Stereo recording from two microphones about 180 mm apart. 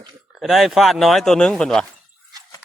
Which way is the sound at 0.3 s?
Centre (ahead or behind).